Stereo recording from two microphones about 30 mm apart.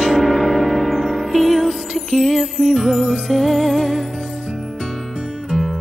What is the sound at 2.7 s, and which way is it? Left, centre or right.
Music, right.